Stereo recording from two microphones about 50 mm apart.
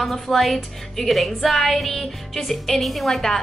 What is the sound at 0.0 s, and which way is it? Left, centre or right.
A woman's voice, centre.